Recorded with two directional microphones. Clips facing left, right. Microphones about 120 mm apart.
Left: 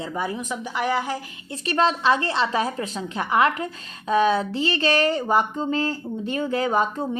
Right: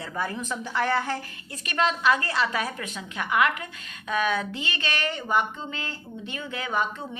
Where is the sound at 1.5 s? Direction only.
30° left (ahead or behind).